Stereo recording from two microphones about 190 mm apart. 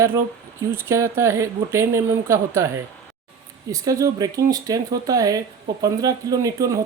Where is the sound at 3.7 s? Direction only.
20° right (ahead or behind).